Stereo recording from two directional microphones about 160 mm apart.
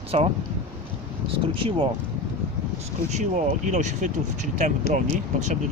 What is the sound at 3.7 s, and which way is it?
Speech, 50° right (ahead or behind).